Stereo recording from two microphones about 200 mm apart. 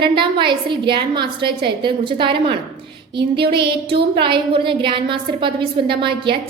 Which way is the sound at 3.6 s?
55° right (ahead or behind).